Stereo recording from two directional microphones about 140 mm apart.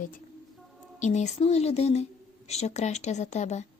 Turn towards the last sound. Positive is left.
turn(degrees=55)  # may be behind; listen again after turning